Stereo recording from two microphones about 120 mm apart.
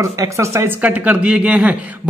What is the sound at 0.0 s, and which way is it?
Speech, 25° right (ahead or behind).